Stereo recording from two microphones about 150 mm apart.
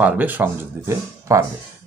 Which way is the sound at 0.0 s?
10° right (ahead or behind).